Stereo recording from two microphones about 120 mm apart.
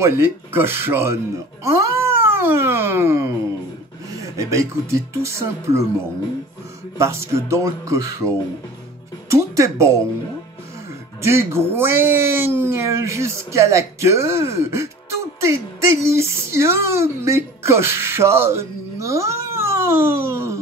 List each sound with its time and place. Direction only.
0.0 s speech: 20° right (ahead or behind)
7.0 s speech: 25° right (ahead or behind)
9.3 s speech: 25° right (ahead or behind)
11.2 s speech: 20° right (ahead or behind)